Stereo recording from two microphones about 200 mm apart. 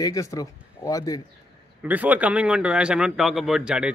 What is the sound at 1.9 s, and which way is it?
Speech, 10° right (ahead or behind).